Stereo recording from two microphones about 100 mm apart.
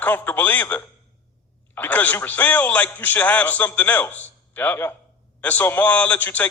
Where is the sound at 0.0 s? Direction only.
15° left (ahead or behind).